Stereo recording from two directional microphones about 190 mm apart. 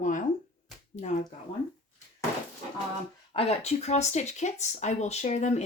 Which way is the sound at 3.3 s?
35° left (ahead or behind).